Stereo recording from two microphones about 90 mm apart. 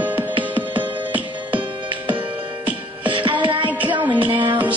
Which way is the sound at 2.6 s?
70° right (ahead or behind).